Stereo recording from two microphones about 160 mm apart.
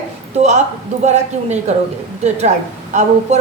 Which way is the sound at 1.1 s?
45° right (ahead or behind).